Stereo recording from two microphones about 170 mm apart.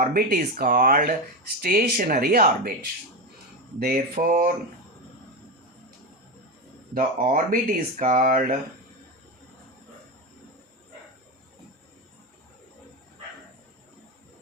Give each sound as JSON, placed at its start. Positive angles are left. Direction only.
{"t": 0.0, "sound": "speech", "side_deg": -60}
{"t": 3.8, "sound": "speech", "side_deg": -60}
{"t": 6.9, "sound": "speech", "side_deg": -55}